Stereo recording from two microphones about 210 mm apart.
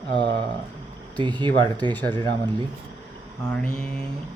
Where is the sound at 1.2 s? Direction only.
20° right (ahead or behind).